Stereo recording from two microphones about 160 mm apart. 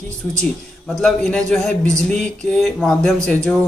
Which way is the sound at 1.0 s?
5° left (ahead or behind).